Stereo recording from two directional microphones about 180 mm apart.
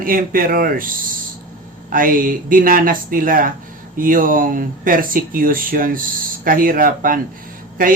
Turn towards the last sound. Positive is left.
turn(degrees=-50)  # may be behind; listen again after turning